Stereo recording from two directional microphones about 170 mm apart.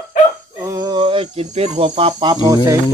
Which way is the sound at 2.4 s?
20° right (ahead or behind).